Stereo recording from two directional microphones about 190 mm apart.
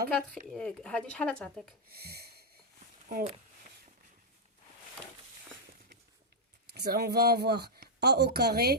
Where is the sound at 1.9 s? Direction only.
55° right (ahead or behind).